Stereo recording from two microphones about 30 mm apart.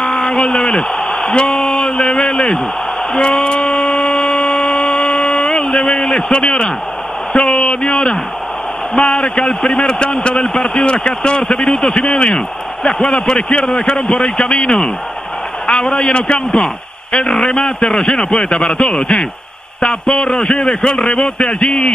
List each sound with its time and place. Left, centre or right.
0.0 s a sound: left
1.6 s speech: left
3.1 s a sound: left
6.3 s a man's voice: left
16.1 s speech: left
16.3 s a man's voice: left